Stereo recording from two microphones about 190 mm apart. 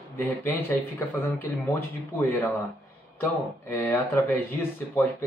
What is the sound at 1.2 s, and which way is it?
A man's voice, 10° left (ahead or behind).